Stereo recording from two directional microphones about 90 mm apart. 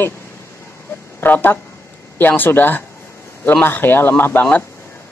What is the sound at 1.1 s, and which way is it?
Speech, 20° left (ahead or behind).